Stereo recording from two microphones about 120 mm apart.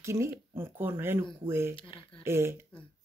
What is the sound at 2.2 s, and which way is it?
Speech, 20° right (ahead or behind).